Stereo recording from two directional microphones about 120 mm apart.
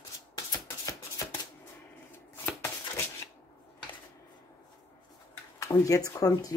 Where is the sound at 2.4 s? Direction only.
20° left (ahead or behind).